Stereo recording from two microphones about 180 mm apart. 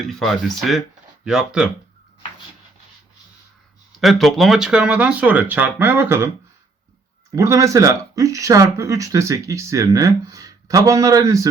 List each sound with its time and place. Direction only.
0.0 s speech: centre (ahead or behind)
4.0 s speech: centre (ahead or behind)
7.3 s speech: 15° right (ahead or behind)